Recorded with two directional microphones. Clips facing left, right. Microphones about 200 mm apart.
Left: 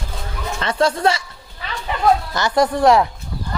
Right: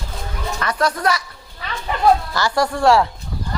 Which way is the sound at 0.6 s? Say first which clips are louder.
Left 3 dB; 25° left (ahead or behind).